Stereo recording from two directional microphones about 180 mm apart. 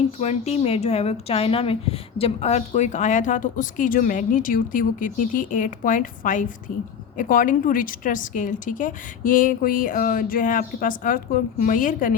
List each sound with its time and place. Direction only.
0.2 s a woman's voice: 35° left (ahead or behind)